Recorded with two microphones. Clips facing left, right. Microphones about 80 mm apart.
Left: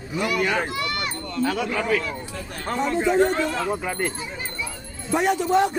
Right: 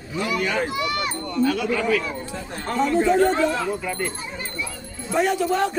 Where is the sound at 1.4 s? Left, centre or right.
Left.